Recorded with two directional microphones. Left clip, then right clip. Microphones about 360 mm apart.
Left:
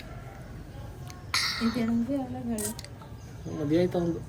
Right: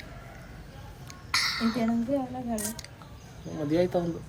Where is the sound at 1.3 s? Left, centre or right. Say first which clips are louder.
Right 1 dB; centre.